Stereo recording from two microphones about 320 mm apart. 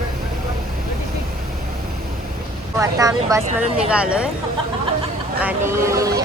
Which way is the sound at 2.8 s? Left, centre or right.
Centre.